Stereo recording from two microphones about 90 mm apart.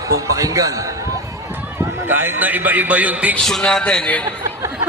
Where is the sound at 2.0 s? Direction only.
25° right (ahead or behind).